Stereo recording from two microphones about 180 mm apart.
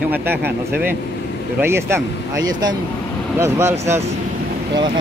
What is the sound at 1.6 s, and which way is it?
Speech, 15° right (ahead or behind).